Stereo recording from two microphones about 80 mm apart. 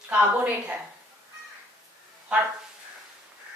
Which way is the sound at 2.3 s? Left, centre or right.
Centre.